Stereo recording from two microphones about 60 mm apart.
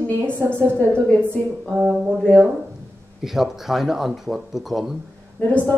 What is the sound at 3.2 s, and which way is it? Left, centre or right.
Speech, centre.